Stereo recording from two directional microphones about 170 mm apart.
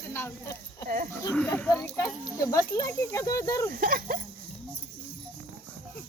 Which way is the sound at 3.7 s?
60° right (ahead or behind).